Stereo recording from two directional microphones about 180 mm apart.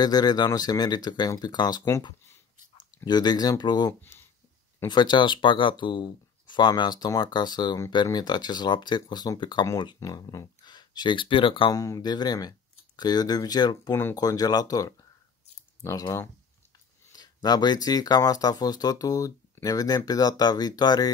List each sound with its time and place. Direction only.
0.0 s speech: 20° left (ahead or behind)